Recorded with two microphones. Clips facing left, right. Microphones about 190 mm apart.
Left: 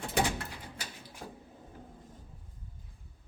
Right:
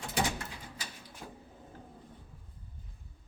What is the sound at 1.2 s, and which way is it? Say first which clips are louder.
Cupboard open or close: left 2 dB; 40° left (ahead or behind).